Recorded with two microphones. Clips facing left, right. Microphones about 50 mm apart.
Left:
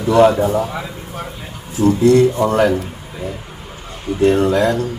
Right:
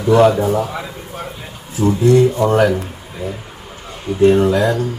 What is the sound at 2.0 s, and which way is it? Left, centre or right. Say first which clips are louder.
Speech: even; right.